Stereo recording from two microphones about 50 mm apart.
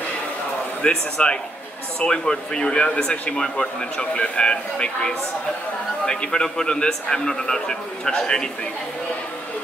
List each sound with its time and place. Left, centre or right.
0.8 s speech: centre